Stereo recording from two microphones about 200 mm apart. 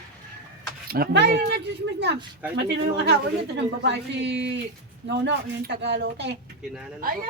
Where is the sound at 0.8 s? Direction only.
50° right (ahead or behind).